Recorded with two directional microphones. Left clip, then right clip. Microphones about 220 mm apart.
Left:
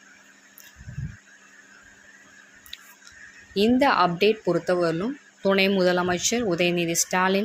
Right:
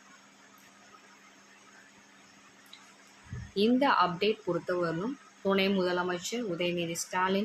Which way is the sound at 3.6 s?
20° left (ahead or behind).